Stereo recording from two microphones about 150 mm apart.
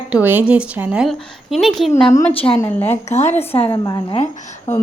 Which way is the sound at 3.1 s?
50° left (ahead or behind).